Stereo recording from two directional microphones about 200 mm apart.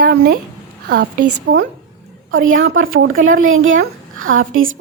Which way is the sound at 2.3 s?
80° right.